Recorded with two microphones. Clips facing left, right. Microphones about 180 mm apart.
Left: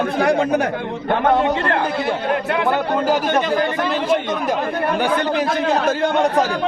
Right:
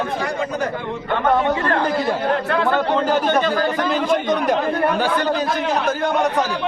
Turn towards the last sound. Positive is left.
turn(degrees=20)  # may be behind; listen again after turning